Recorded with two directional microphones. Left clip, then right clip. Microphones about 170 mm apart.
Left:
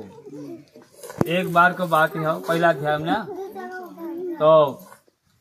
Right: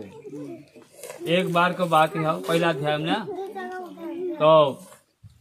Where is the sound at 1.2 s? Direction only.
30° right (ahead or behind).